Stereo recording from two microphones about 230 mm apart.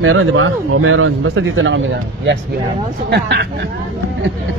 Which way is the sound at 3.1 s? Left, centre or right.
Right.